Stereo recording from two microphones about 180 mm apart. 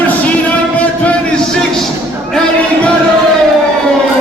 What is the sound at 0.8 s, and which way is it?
Music, 5° left (ahead or behind).